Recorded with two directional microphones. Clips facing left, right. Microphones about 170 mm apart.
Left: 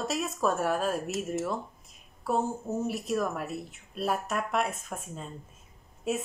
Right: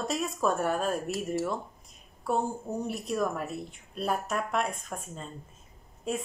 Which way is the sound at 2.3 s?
Centre (ahead or behind).